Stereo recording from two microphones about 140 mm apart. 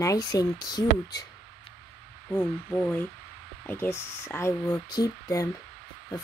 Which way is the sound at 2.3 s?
10° left (ahead or behind).